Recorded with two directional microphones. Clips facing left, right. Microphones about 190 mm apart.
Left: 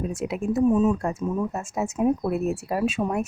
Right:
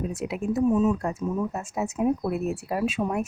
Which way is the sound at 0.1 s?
45° left (ahead or behind).